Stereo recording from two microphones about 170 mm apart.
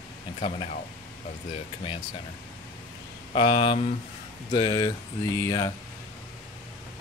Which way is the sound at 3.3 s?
30° left (ahead or behind).